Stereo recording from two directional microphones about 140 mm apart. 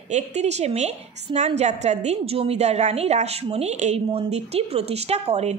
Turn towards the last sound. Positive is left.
turn(degrees=-50)  # may be behind; listen again after turning